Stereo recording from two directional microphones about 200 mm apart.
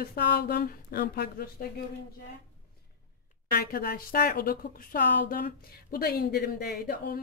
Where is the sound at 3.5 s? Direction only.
50° left (ahead or behind).